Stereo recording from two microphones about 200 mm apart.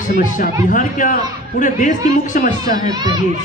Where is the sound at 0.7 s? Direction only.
40° left (ahead or behind).